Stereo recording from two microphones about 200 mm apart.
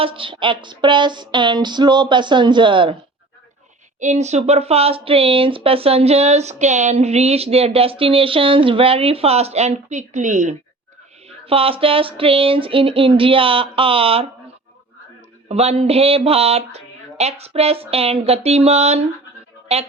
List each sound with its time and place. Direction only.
0.0 s speech: 25° right (ahead or behind)
4.0 s speech: 35° right (ahead or behind)
15.4 s speech: 30° right (ahead or behind)